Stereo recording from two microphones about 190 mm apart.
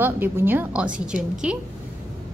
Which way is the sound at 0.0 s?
10° right (ahead or behind).